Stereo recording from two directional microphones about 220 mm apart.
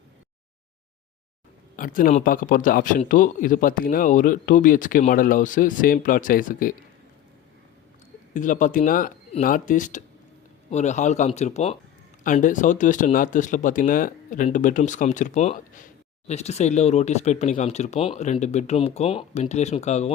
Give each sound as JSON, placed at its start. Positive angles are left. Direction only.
{"t": 1.7, "sound": "speech", "side_deg": 40}
{"t": 8.3, "sound": "speech", "side_deg": 35}